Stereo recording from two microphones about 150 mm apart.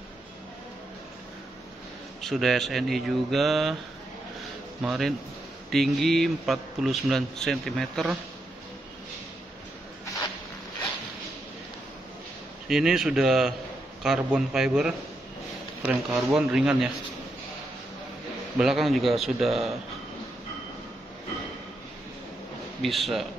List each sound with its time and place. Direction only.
2.2 s a man's voice: centre (ahead or behind)
4.8 s a man's voice: centre (ahead or behind)
12.6 s a man's voice: 5° right (ahead or behind)
18.6 s a man's voice: centre (ahead or behind)
22.8 s a man's voice: centre (ahead or behind)